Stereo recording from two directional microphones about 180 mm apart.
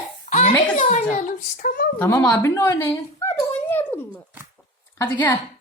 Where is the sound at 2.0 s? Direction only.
15° left (ahead or behind).